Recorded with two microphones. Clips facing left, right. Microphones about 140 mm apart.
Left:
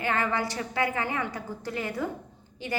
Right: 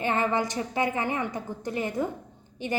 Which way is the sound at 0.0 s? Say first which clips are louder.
Right 2 dB; 20° right (ahead or behind).